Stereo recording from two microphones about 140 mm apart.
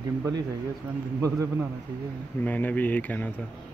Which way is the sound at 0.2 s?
25° right (ahead or behind).